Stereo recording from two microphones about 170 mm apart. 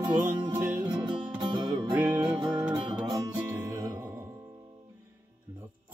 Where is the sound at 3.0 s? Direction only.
20° right (ahead or behind).